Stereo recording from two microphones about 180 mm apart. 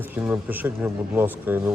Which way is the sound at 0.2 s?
10° right (ahead or behind).